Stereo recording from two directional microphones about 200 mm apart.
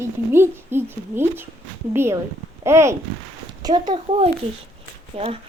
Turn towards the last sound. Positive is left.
turn(degrees=-30)  # may be behind; listen again after turning